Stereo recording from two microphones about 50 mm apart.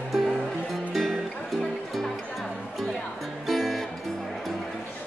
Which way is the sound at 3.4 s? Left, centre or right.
Centre.